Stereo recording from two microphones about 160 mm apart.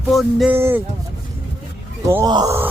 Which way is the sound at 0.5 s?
15° right (ahead or behind).